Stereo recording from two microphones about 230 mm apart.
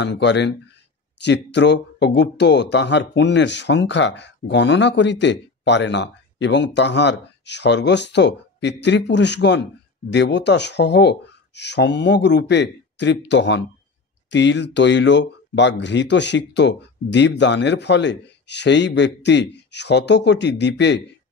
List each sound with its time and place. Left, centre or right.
0.0 s speech: left